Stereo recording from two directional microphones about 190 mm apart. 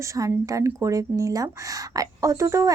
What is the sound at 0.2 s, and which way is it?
A woman's voice, 15° right (ahead or behind).